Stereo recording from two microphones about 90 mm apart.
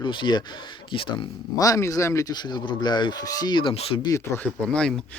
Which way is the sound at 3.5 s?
85° left.